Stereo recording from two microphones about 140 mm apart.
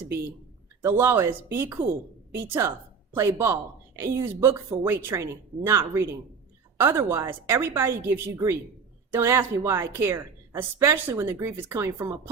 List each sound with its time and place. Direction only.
0.8 s a woman's voice: 20° right (ahead or behind)